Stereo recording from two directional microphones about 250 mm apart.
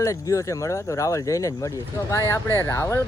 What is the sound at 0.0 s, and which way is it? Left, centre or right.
Speech, centre.